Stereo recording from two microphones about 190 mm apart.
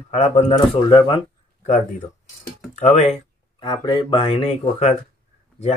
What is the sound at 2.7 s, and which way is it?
Speech, 35° left (ahead or behind).